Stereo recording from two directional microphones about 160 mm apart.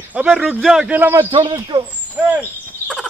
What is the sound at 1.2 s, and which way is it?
Speech, 35° right (ahead or behind).